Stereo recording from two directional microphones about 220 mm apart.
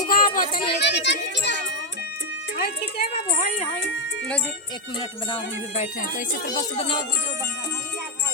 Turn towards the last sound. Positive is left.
turn(degrees=25)  # may be behind; listen again after turning